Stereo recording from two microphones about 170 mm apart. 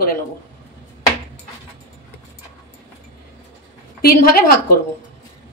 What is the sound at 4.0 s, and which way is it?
Speech, 60° left (ahead or behind).